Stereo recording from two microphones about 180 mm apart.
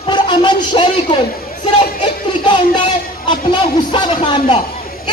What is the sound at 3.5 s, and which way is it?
Speech, 25° left (ahead or behind).